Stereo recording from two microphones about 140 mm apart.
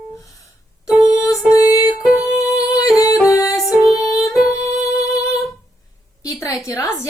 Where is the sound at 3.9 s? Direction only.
20° left (ahead or behind).